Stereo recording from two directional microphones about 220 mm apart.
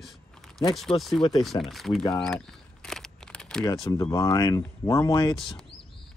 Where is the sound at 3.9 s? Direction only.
15° left (ahead or behind).